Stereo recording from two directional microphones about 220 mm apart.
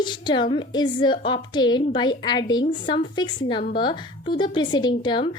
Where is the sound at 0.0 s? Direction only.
20° left (ahead or behind).